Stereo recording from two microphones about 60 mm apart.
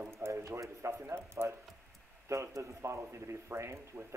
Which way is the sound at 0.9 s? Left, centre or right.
Right.